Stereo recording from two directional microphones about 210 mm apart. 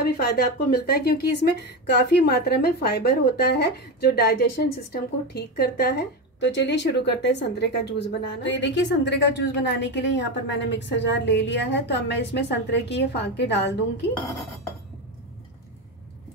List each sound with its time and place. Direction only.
0.0 s speech: 50° left (ahead or behind)